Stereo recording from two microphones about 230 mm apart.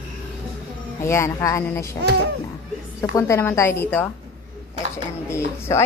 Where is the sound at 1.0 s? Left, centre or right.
Centre.